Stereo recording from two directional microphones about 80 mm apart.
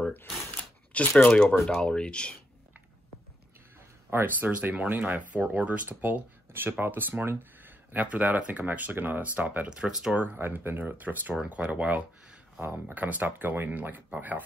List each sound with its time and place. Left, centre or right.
0.9 s speech: centre
4.1 s speech: right
4.5 s speech: centre
9.7 s speech: centre
10.1 s speech: right